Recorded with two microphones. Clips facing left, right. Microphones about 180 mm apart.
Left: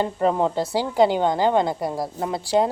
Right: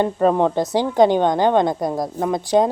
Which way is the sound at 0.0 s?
25° right (ahead or behind).